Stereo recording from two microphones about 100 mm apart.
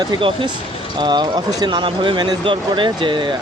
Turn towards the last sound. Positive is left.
turn(degrees=-50)  # may be behind; listen again after turning